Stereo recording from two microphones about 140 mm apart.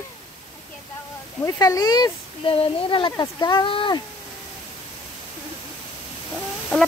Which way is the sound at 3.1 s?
30° left (ahead or behind).